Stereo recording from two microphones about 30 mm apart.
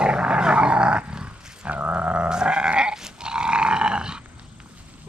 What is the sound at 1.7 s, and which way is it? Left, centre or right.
Sheep, right.